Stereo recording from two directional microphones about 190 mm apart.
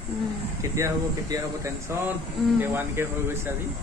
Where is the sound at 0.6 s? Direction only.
20° right (ahead or behind).